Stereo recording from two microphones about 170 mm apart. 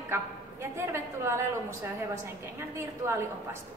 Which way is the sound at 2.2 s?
15° right (ahead or behind).